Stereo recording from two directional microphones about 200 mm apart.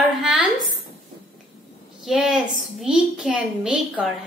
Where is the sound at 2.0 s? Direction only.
Centre (ahead or behind).